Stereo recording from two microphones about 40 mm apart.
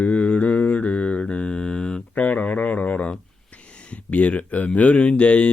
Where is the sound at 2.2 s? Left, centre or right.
Left.